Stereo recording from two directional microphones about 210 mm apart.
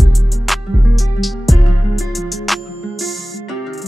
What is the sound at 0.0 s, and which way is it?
Music, centre (ahead or behind).